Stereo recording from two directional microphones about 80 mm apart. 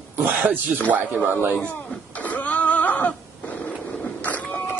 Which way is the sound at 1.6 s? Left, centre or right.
Centre.